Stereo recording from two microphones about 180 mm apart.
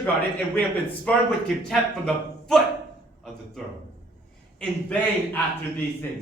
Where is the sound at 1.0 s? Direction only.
5° left (ahead or behind).